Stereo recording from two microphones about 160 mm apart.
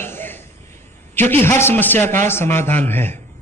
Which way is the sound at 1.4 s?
15° left (ahead or behind).